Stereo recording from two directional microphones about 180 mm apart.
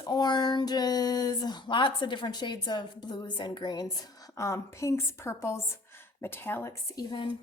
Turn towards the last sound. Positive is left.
turn(degrees=25)  # may be behind; listen again after turning